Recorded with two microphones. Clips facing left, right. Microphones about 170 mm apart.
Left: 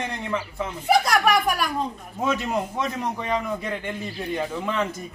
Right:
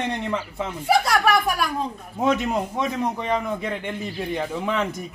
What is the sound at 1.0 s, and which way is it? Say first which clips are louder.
Speech: even; centre (ahead or behind).